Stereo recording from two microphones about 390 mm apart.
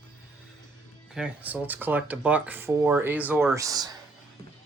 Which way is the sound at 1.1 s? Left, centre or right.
Centre.